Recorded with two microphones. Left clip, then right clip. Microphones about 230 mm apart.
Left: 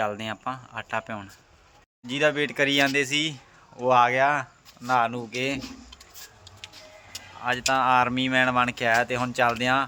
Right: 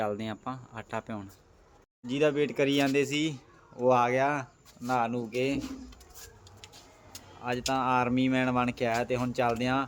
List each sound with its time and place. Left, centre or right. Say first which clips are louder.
0.0 s speech: left 5 dB; centre
7.7 s speech: left 6 dB; centre